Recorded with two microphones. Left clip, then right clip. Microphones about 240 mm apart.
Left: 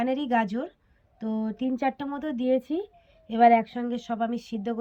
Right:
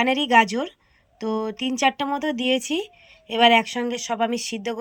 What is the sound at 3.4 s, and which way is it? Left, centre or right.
Speech, centre.